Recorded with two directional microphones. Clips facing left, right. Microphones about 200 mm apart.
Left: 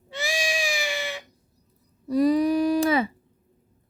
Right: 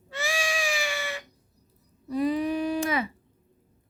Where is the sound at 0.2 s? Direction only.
15° left (ahead or behind).